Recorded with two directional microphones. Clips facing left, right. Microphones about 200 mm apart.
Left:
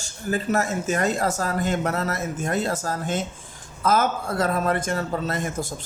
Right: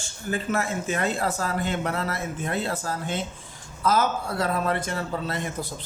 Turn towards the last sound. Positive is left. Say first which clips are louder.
# left 3 dB
turn(degrees=45)  # may be behind; listen again after turning